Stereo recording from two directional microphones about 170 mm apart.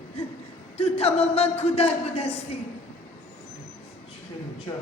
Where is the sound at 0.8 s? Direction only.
35° left (ahead or behind).